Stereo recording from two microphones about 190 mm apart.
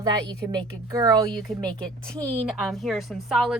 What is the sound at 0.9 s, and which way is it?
Speech, 20° right (ahead or behind).